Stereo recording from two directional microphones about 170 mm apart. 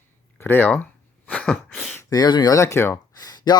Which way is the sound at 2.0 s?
20° left (ahead or behind).